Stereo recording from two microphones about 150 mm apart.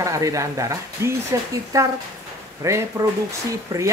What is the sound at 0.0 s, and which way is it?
Speech, 20° right (ahead or behind).